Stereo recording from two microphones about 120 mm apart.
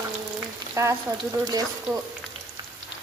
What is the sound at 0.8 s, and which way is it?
Speech, 30° right (ahead or behind).